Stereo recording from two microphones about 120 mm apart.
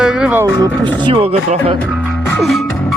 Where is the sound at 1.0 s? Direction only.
50° right (ahead or behind).